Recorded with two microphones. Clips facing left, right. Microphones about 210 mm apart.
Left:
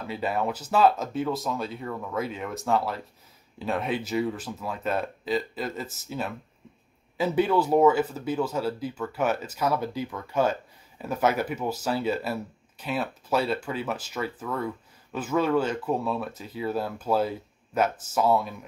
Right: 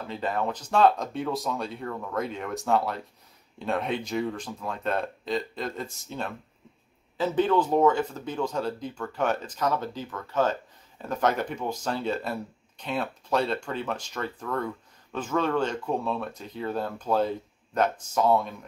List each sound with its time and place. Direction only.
0.0 s speech: 10° left (ahead or behind)